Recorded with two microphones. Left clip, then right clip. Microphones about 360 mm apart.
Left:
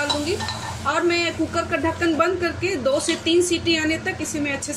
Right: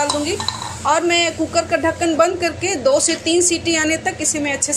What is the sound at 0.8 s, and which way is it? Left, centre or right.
Speech, centre.